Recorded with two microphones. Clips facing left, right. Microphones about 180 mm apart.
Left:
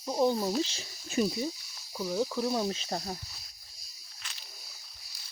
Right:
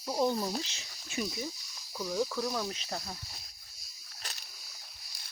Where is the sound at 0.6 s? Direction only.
35° left (ahead or behind).